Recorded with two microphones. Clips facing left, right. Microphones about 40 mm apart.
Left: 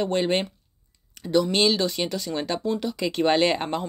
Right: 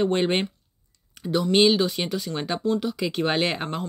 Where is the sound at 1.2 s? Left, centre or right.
Centre.